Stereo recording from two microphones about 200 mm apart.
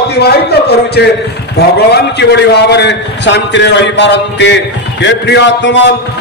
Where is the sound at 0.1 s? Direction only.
55° left (ahead or behind).